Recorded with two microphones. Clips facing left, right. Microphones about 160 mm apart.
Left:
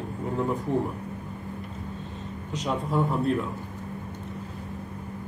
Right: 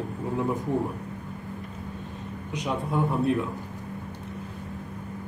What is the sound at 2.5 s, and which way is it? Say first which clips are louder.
Speech: left 1 dB; 5° right (ahead or behind).